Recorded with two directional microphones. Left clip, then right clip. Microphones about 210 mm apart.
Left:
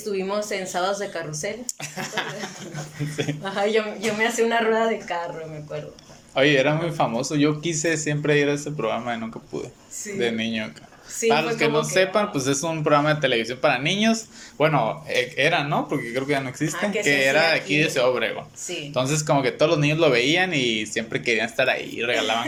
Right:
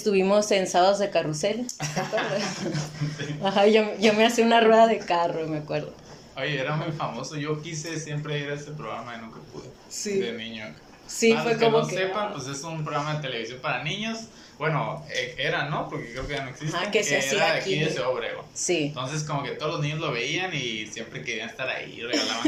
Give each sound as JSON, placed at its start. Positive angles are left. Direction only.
{"t": 0.0, "sound": "speech", "side_deg": -10}
{"t": 1.8, "sound": "speech", "side_deg": 50}
{"t": 3.4, "sound": "speech", "side_deg": -10}
{"t": 6.3, "sound": "speech", "side_deg": 45}
{"t": 10.2, "sound": "speech", "side_deg": 45}